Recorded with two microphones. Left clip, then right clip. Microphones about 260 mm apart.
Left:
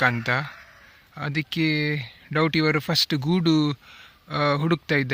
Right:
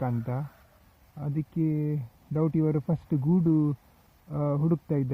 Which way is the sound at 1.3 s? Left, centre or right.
Left.